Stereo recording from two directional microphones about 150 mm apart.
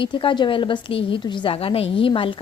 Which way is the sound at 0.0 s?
35° left (ahead or behind).